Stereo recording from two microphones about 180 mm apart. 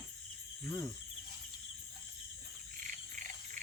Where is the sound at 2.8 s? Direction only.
45° right (ahead or behind).